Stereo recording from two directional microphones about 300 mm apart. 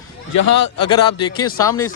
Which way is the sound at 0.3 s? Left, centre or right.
Left.